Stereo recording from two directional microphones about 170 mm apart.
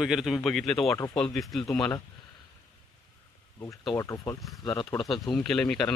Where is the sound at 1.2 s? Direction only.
Centre (ahead or behind).